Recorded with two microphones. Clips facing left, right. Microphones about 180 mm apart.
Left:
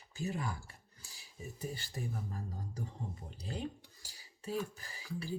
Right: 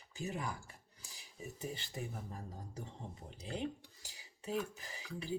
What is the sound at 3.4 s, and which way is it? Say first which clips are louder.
Cutlery: right 1 dB; 20° right (ahead or behind).